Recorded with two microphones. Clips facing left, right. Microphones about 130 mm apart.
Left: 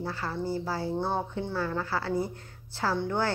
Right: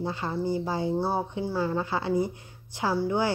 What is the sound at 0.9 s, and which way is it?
A woman's voice, 5° right (ahead or behind).